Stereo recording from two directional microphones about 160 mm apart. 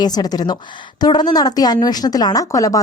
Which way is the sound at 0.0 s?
25° left (ahead or behind).